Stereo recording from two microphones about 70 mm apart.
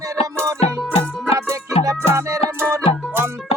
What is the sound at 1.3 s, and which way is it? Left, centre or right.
Music, right.